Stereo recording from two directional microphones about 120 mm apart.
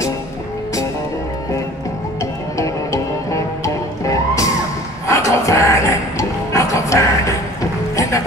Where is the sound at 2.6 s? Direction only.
25° left (ahead or behind).